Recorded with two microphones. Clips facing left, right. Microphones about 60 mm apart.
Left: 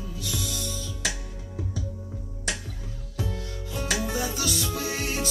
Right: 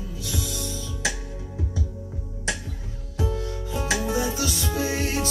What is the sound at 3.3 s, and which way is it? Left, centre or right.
Music, right.